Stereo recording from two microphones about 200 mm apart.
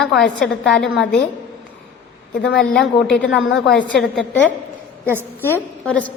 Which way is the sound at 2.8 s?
5° left (ahead or behind).